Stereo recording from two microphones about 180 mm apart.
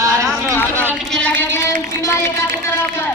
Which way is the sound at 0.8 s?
Centre (ahead or behind).